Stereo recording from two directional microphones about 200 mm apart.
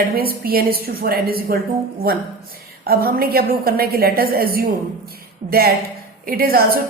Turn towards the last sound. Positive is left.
turn(degrees=-50)  # may be behind; listen again after turning